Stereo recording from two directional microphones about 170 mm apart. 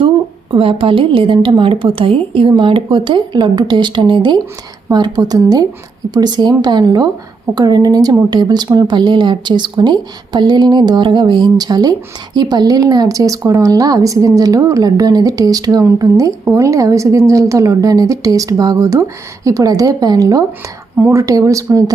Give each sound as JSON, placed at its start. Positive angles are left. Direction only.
{"t": 0.5, "sound": "speech", "side_deg": -30}